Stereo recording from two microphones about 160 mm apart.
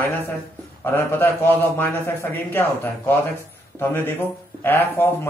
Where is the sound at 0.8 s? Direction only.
15° left (ahead or behind).